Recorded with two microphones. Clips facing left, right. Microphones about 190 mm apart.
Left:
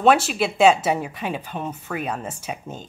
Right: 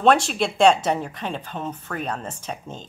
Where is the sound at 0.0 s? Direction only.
5° left (ahead or behind).